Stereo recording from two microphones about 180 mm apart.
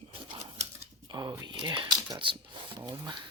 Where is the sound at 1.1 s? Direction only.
20° right (ahead or behind).